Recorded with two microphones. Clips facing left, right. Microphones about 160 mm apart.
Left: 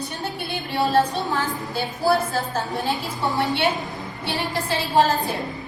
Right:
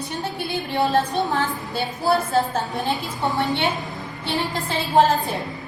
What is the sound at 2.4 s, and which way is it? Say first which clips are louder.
Speech: right 1 dB; centre (ahead or behind).